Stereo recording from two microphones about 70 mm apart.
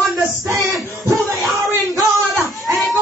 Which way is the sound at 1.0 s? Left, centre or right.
Centre.